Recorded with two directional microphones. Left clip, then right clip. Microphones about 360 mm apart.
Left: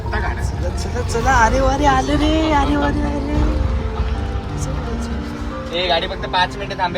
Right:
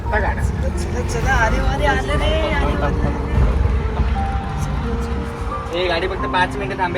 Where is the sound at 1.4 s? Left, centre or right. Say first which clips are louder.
Left 6 dB; left.